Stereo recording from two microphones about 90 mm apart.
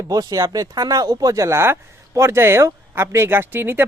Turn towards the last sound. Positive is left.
turn(degrees=-25)  # may be behind; listen again after turning